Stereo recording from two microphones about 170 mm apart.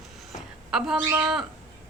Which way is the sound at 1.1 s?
15° right (ahead or behind).